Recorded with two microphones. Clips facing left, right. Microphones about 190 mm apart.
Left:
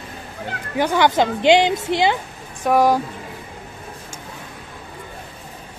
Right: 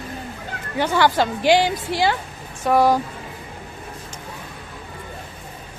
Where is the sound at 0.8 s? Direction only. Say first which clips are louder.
Left 2 dB; 15° left (ahead or behind).